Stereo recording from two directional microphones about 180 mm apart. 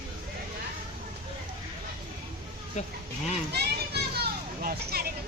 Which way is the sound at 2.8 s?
40° left (ahead or behind).